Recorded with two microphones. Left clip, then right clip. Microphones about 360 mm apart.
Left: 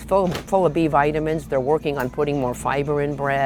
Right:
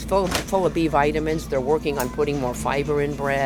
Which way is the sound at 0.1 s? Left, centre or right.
Left.